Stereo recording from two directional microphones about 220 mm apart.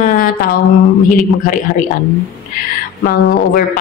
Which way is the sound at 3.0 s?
40° left (ahead or behind).